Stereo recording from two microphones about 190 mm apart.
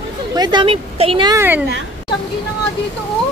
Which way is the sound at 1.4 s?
10° right (ahead or behind).